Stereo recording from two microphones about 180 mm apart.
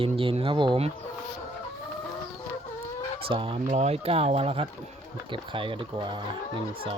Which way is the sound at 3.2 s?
30° right (ahead or behind).